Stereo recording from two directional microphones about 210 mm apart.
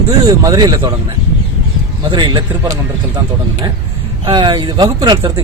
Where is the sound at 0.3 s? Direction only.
20° right (ahead or behind).